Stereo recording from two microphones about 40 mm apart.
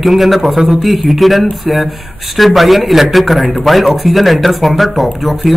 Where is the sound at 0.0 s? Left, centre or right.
Centre.